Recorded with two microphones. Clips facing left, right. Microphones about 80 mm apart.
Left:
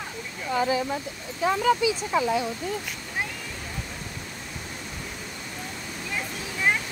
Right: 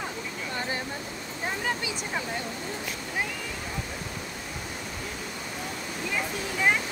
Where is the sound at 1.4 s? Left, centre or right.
Left.